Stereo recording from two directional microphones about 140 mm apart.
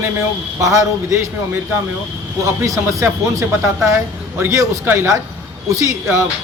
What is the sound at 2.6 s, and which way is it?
Speech, 20° right (ahead or behind).